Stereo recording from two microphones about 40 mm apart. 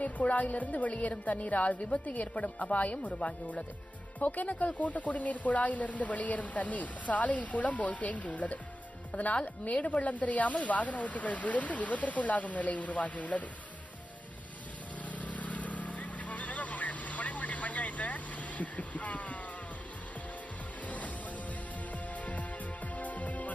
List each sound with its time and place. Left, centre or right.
0.0 s speech: left
15.0 s vehicle: left
22.1 s music: left